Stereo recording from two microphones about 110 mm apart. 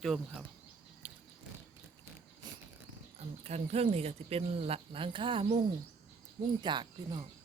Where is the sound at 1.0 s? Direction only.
15° right (ahead or behind).